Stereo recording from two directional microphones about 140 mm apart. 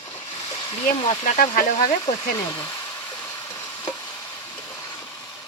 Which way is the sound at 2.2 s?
25° left (ahead or behind).